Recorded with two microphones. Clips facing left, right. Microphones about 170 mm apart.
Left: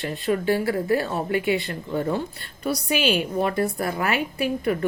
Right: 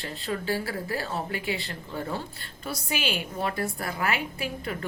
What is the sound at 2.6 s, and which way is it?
A woman's voice, 20° left (ahead or behind).